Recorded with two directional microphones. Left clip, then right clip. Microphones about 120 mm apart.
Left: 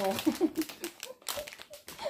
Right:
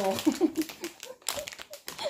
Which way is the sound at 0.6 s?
30° left (ahead or behind).